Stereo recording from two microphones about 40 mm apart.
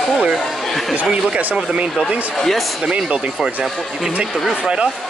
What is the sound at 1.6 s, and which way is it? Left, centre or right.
Speech, right.